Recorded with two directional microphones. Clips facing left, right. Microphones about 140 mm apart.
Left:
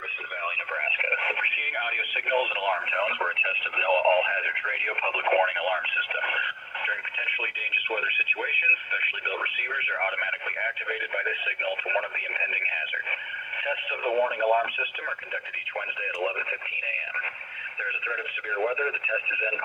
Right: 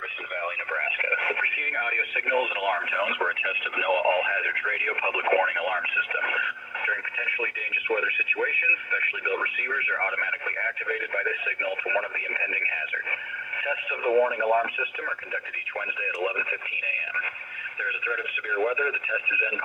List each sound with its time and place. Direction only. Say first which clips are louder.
0.9 s radio: right 1 dB; 25° left (ahead or behind)
6.1 s a sound: right 1 dB; 20° left (ahead or behind)
6.8 s radio: right 2 dB; 20° left (ahead or behind)
13.7 s radio: right 2 dB; 15° left (ahead or behind)
18.5 s radio: right 1 dB; 25° left (ahead or behind)